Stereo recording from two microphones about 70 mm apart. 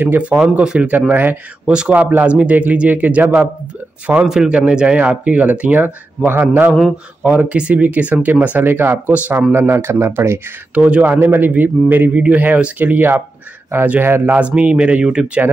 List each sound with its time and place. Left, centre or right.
0.0 s speech: right
1.7 s speech: centre; by 10.4 s right
10.7 s speech: centre
14.3 s speech: centre